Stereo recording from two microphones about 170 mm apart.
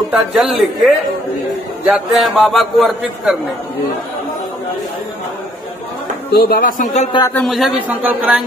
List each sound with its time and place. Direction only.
0.1 s a man's voice: 5° right (ahead or behind)
6.3 s speech: 60° left (ahead or behind)
7.2 s a man's voice: 15° left (ahead or behind)
7.4 s a man's voice: centre (ahead or behind)